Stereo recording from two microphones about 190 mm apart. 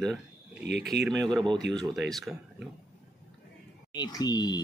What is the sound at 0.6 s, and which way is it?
Speech, 65° right (ahead or behind).